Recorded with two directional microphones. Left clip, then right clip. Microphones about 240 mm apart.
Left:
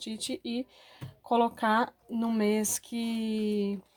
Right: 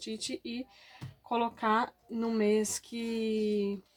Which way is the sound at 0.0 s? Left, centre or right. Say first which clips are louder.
Left 2 dB; left.